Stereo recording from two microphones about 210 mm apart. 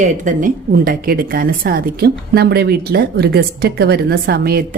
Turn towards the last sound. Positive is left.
turn(degrees=-45)  # may be behind; listen again after turning